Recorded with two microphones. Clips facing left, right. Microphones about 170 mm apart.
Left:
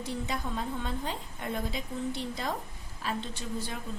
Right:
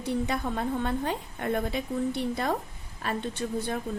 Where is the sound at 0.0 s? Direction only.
60° right (ahead or behind).